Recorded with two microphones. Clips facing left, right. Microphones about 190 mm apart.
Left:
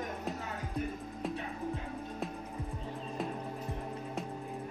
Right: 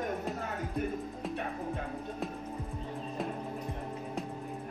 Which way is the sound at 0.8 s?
55° right (ahead or behind).